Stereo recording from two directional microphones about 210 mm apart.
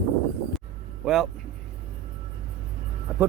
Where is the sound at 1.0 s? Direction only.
Centre (ahead or behind).